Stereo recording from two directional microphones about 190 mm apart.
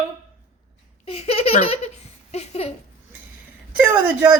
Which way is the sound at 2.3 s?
35° left (ahead or behind).